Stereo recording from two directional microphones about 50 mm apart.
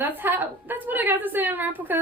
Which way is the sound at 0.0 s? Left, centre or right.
Right.